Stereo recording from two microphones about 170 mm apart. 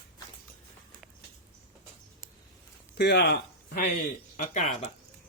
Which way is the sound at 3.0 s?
75° left (ahead or behind).